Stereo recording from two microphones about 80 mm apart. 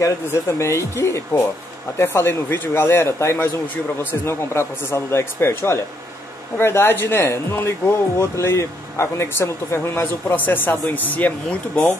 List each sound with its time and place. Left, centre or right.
0.0 s speech: left; by 11.9 s centre